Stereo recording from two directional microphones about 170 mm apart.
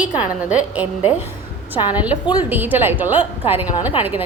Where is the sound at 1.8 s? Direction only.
30° left (ahead or behind).